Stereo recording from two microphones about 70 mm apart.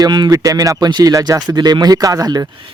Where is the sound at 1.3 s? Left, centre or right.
Right.